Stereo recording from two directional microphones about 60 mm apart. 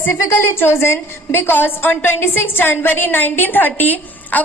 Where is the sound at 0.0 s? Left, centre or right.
Left.